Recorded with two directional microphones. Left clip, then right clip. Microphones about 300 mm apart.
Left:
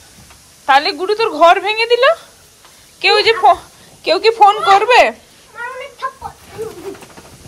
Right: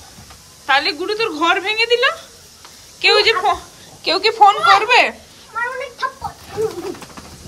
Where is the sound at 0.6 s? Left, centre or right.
Centre.